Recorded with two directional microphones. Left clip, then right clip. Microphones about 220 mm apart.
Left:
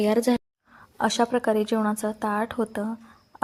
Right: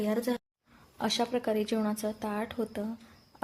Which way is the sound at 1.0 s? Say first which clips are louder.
Left 7 dB; 20° left (ahead or behind).